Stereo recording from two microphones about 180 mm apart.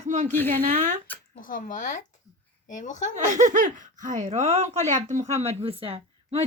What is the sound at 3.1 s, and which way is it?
A woman's voice, 45° right (ahead or behind).